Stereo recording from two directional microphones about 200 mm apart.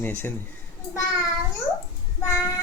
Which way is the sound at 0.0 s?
10° left (ahead or behind).